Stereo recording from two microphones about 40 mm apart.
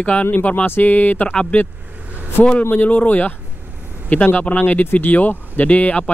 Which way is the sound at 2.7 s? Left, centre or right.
Left.